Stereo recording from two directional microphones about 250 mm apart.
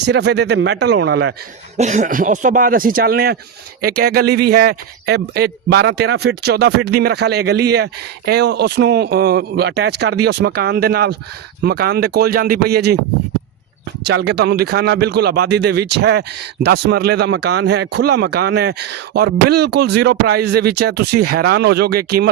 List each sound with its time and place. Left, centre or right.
0.0 s a man's voice: right
1.7 s a man's voice: right
14.0 s a man's voice: right